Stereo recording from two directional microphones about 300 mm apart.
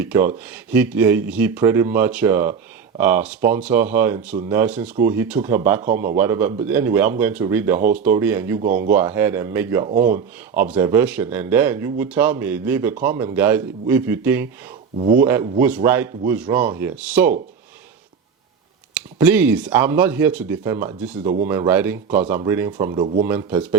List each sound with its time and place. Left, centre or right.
0.0 s speech: centre
14.9 s speech: right
15.2 s speech: centre
18.9 s speech: centre